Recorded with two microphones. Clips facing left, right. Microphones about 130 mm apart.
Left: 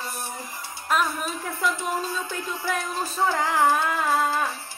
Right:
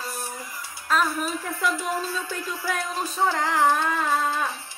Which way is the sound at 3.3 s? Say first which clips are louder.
Even; 5° left (ahead or behind).